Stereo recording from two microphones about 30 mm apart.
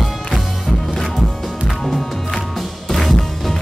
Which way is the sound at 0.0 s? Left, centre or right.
Centre.